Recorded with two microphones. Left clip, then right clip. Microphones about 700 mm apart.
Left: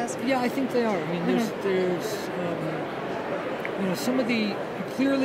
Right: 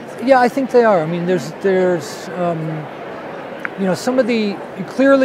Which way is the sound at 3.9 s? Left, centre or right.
Right.